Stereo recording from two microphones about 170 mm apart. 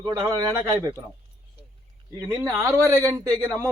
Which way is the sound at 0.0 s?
20° right (ahead or behind).